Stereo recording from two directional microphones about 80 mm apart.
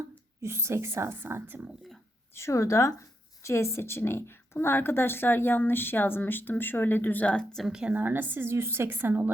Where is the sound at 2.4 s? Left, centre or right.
Left; by 7.7 s centre.